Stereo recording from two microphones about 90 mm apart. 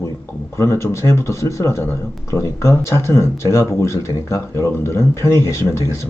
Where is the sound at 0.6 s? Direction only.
30° left (ahead or behind).